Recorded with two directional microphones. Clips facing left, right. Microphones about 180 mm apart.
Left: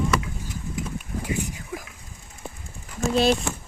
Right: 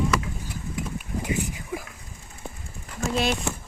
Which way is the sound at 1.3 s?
10° right (ahead or behind).